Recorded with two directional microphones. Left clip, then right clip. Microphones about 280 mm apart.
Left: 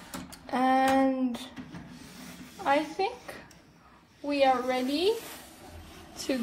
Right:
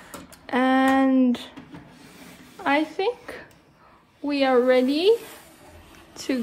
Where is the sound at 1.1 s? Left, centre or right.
Right.